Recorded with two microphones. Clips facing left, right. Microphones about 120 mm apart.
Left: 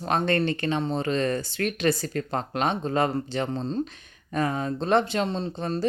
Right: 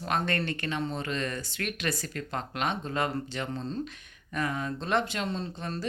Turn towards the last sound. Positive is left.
turn(degrees=30)  # may be behind; listen again after turning